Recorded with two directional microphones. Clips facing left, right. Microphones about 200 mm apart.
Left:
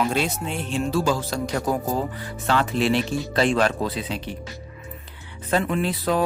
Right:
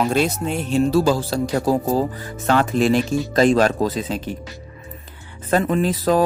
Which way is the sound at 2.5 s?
45° right (ahead or behind).